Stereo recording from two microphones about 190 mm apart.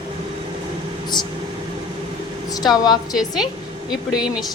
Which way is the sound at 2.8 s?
20° left (ahead or behind).